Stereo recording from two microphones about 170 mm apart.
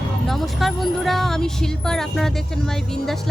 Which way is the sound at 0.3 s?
Centre (ahead or behind).